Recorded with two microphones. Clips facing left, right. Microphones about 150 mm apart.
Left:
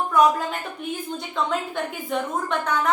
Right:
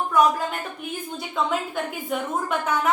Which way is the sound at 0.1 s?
Centre (ahead or behind).